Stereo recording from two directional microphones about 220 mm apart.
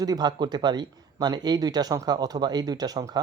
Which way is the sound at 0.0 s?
20° right (ahead or behind).